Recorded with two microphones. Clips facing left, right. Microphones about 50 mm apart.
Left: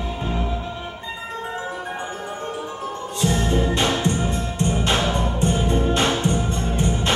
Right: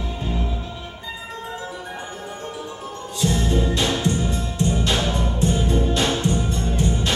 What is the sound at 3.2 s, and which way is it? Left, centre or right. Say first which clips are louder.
Music: left 1 dB; left.